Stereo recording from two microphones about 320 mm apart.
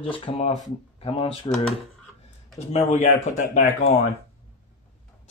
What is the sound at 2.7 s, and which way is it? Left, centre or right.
Speech, left.